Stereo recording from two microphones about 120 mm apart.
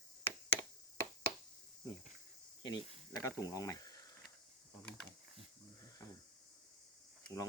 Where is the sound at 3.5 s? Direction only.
30° left (ahead or behind).